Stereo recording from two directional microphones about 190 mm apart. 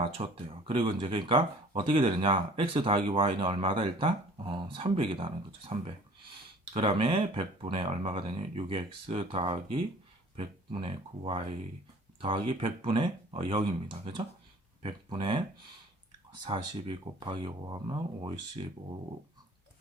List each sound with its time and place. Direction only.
0.0 s speech: 30° right (ahead or behind)